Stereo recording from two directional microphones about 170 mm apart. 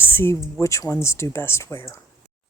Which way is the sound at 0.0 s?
15° left (ahead or behind).